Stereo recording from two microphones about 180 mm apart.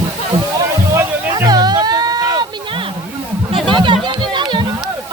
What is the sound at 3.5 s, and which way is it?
Music, 25° right (ahead or behind).